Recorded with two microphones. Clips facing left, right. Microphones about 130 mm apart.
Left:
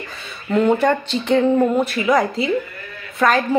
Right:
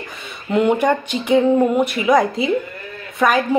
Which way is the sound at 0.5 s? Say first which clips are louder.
Even; 15° right (ahead or behind).